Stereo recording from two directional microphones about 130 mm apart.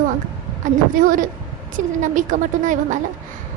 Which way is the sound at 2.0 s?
80° right.